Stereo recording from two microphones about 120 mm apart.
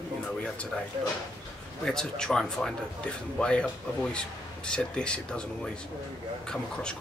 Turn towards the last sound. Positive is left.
turn(degrees=5)  # may be behind; listen again after turning